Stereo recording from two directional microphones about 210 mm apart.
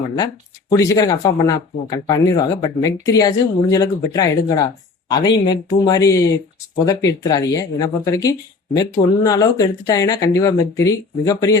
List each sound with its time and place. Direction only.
0.7 s speech: 15° left (ahead or behind)